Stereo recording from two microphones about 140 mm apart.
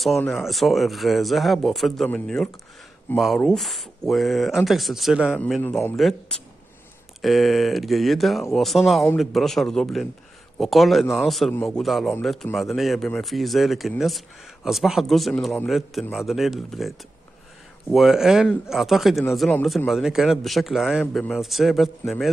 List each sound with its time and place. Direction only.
0.3 s speech: centre (ahead or behind)
5.6 s a man's voice: 15° left (ahead or behind)
5.9 s speech: 5° left (ahead or behind)
17.9 s speech: centre (ahead or behind)